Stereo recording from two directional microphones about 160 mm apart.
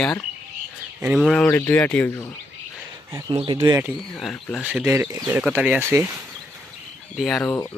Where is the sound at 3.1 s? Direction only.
25° right (ahead or behind).